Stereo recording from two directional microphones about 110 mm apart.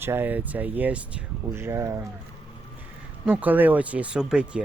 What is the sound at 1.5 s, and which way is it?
Speech, 25° right (ahead or behind).